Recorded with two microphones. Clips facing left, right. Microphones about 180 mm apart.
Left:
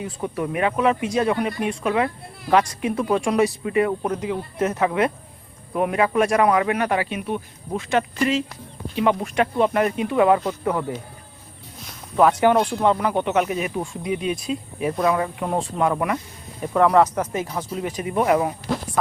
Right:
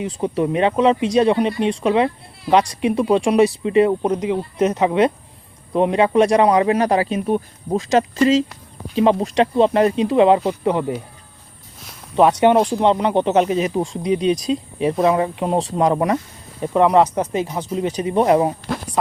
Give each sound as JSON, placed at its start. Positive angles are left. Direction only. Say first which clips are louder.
{"t": 0.0, "sound": "speech", "louder": "right 6 dB", "side_deg": -20}
{"t": 12.1, "sound": "speech", "louder": "right 3 dB", "side_deg": -25}
{"t": 16.6, "sound": "speech", "louder": "right 2 dB", "side_deg": -20}